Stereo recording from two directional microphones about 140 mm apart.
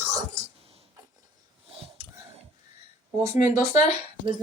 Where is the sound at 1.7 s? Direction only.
45° right (ahead or behind).